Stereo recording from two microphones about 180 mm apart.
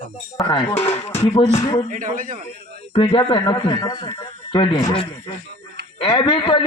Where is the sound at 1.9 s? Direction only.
45° right (ahead or behind).